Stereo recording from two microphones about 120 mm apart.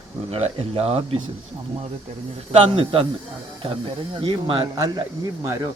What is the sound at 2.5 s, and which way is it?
A man's voice, 45° right (ahead or behind).